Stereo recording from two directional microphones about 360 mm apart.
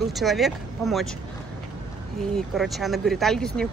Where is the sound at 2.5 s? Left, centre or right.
Centre.